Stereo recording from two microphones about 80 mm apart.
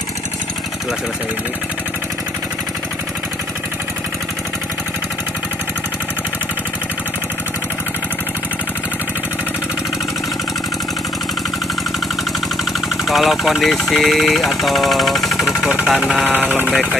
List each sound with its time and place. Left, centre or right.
13.1 s speech: centre
16.3 s speech: left